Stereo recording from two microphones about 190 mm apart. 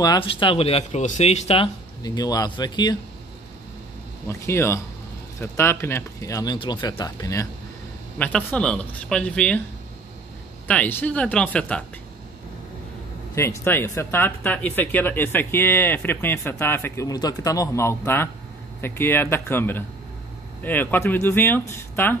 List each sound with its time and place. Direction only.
0.0 s speech: 25° left (ahead or behind)
2.0 s speech: 20° left (ahead or behind)
4.3 s speech: 15° left (ahead or behind)
10.7 s speech: 10° left (ahead or behind)
13.3 s speech: 15° left (ahead or behind)